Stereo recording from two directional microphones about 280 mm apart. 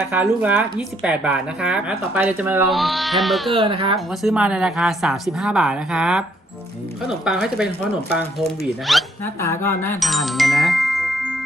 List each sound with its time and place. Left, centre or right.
0.1 s speech: centre
3.5 s speech: centre
3.9 s speech: centre
7.3 s speech: centre